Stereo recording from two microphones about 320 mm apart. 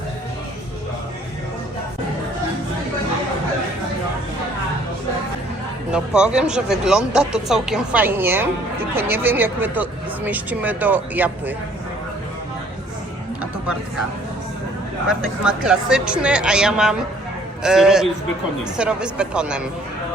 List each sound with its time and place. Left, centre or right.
5.9 s speech: centre
15.0 s speech: centre